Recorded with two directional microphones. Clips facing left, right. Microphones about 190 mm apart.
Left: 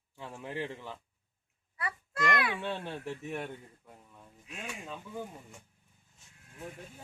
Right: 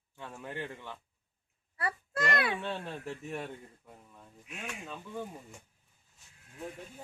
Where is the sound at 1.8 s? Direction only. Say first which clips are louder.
Right 1 dB; 35° right (ahead or behind).